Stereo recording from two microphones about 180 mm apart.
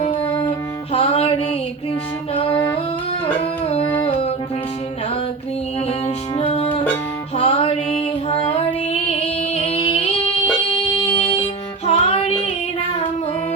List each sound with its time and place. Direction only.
0.9 s music: 35° left (ahead or behind)
3.9 s music: 30° left (ahead or behind)
6.3 s music: 35° left (ahead or behind)
11.2 s music: 30° left (ahead or behind)